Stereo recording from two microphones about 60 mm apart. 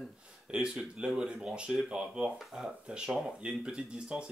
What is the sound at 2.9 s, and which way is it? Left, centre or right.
Speech, centre.